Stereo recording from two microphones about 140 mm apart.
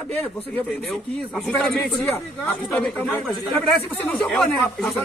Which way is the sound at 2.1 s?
15° left (ahead or behind).